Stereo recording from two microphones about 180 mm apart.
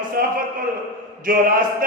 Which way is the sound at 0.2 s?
60° right (ahead or behind).